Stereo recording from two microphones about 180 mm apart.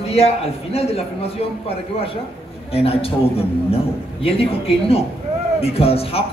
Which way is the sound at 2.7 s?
35° left (ahead or behind).